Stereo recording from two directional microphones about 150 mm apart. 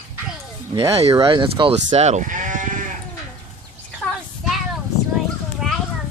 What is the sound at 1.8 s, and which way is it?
Sheep, 50° right (ahead or behind).